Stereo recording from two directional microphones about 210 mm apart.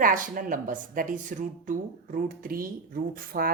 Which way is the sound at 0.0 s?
40° right (ahead or behind).